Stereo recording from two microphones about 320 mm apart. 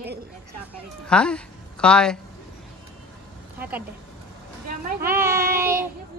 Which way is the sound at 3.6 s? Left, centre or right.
Centre.